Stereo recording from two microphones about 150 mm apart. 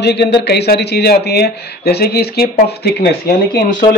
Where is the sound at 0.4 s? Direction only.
90° left.